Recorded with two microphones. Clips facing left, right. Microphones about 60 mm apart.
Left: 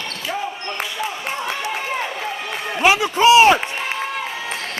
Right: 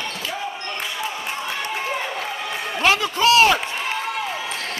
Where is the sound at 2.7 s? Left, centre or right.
Centre.